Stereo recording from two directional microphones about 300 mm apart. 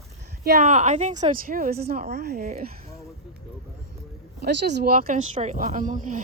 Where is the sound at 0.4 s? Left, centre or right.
Right.